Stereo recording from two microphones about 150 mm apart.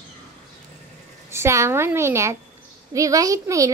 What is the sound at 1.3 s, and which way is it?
A child's voice, 20° right (ahead or behind).